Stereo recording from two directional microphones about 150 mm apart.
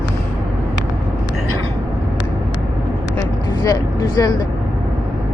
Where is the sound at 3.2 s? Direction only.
25° left (ahead or behind).